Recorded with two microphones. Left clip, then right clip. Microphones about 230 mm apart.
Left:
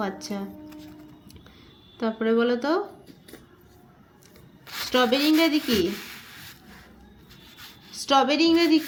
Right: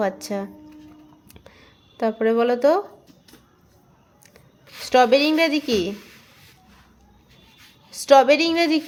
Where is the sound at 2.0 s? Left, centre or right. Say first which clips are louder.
Right 4 dB; right.